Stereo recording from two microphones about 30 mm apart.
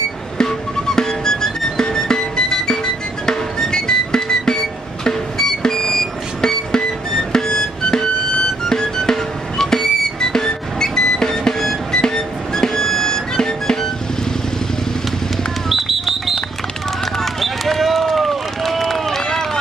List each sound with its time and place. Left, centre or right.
0.4 s music: left
15.7 s a sound: centre
17.0 s basketball bounce: centre
18.6 s run: centre